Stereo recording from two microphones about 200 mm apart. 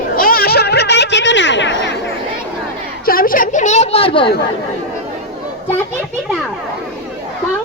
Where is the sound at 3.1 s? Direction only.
45° left (ahead or behind); by 4.3 s 25° left (ahead or behind).